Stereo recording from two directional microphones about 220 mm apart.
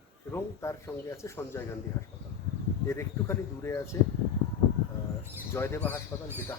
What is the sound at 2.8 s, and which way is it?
Speech, 10° left (ahead or behind).